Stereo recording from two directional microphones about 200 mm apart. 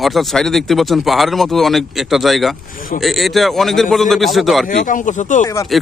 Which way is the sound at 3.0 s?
Centre (ahead or behind).